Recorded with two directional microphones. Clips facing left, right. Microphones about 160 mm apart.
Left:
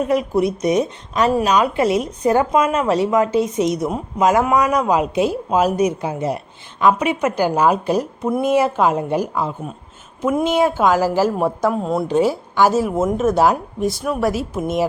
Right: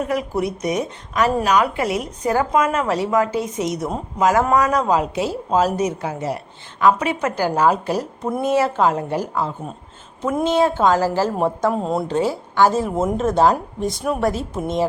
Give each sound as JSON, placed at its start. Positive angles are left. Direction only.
{"t": 0.0, "sound": "a woman's voice", "side_deg": 20}
{"t": 12.0, "sound": "a woman's voice", "side_deg": 15}